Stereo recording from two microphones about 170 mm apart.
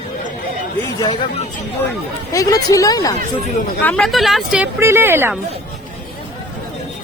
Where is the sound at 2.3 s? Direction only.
20° left (ahead or behind).